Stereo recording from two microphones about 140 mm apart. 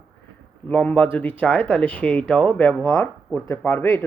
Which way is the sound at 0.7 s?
10° left (ahead or behind).